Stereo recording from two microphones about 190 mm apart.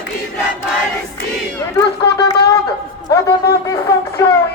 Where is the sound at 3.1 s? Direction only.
15° left (ahead or behind).